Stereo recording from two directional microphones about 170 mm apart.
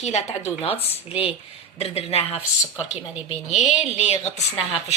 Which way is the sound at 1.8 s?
35° left (ahead or behind).